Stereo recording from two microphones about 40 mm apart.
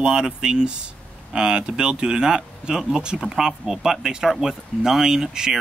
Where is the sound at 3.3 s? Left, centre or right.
Centre.